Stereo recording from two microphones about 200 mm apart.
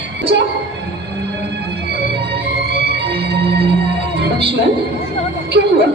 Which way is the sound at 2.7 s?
55° right (ahead or behind).